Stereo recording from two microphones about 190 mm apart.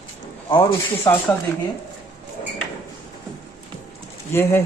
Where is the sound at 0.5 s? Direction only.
15° left (ahead or behind).